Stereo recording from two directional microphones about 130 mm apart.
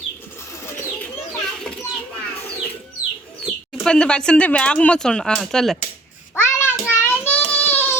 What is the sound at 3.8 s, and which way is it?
Speech, 5° left (ahead or behind).